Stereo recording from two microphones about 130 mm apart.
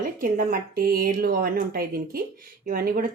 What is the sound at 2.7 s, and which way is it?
Speech, 90° right.